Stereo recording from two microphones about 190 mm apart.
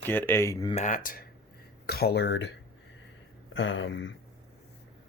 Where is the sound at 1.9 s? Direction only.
55° left (ahead or behind).